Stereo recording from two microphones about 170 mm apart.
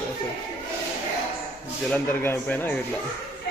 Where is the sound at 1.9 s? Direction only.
10° left (ahead or behind).